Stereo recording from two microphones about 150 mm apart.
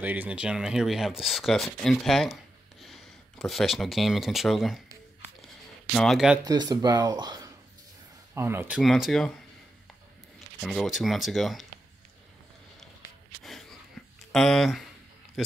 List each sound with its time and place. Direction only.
0.0 s speech: 10° right (ahead or behind)
5.9 s speech: centre (ahead or behind)
6.4 s speech: 25° right (ahead or behind)
8.4 s speech: 15° right (ahead or behind); by 9.3 s centre (ahead or behind)
10.6 s speech: centre (ahead or behind)
13.4 s a sound: centre (ahead or behind)
14.3 s speech: centre (ahead or behind)